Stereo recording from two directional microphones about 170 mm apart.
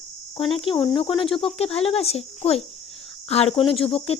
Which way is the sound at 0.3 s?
35° left (ahead or behind).